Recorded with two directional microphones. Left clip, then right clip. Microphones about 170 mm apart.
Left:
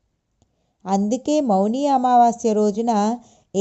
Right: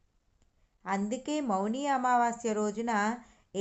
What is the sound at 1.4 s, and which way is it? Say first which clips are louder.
Speech: left 10 dB; 10° left (ahead or behind).